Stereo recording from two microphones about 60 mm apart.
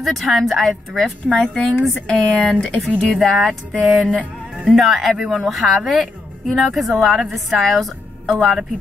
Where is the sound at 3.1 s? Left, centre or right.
Centre.